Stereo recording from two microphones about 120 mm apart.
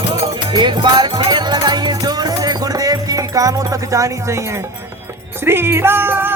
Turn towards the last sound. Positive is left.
turn(degrees=-20)  # may be behind; listen again after turning